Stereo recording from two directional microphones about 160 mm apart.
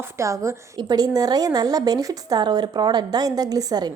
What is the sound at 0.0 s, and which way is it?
Speech, 15° right (ahead or behind).